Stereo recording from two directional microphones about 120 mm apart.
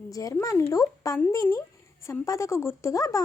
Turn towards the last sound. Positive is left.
turn(degrees=30)  # may be behind; listen again after turning